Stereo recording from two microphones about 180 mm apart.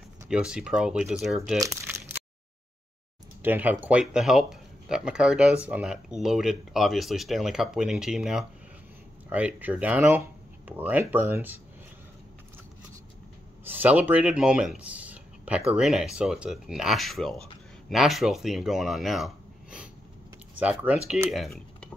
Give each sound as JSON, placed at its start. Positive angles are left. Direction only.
{"t": 0.3, "sound": "speech", "side_deg": -5}
{"t": 1.6, "sound": "a sound", "side_deg": -15}
{"t": 3.4, "sound": "speech", "side_deg": -10}
{"t": 13.7, "sound": "speech", "side_deg": -10}